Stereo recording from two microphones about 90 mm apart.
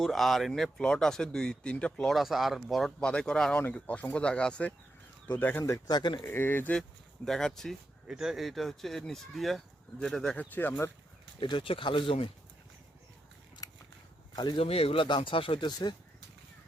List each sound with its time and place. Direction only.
0.0 s speech: centre (ahead or behind)
5.4 s speech: 25° left (ahead or behind)
5.7 s speech: 55° left (ahead or behind)
6.2 s speech: 25° left (ahead or behind)
7.3 s speech: 5° left (ahead or behind)
8.0 s speech: 5° right (ahead or behind)
10.5 s speech: 20° left (ahead or behind)
11.3 s speech: 65° left (ahead or behind)
13.6 s a sound: 45° left (ahead or behind)
14.5 s speech: 90° left; by 16.0 s 60° left (ahead or behind)